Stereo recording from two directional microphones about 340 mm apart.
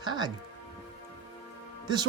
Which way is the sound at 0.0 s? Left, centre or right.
Centre.